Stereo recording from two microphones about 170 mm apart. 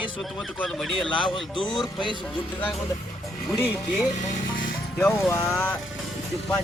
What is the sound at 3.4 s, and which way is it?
Speech, 5° right (ahead or behind).